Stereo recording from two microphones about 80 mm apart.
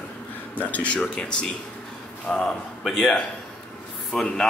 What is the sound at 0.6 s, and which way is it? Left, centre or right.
Speech, centre.